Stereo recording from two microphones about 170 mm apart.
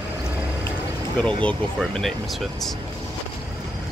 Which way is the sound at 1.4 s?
5° left (ahead or behind).